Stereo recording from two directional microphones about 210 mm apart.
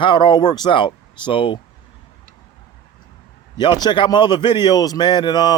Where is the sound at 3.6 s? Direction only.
20° left (ahead or behind).